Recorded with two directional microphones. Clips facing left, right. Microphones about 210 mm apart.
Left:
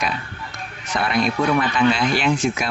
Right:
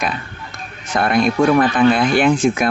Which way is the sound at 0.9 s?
50° right (ahead or behind).